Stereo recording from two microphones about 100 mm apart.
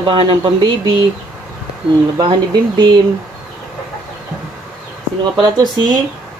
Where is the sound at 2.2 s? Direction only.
50° right (ahead or behind).